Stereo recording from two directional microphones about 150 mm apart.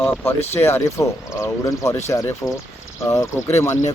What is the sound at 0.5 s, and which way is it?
Speech, 15° left (ahead or behind).